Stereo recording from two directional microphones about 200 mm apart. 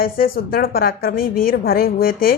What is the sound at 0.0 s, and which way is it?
Speech, 50° left (ahead or behind).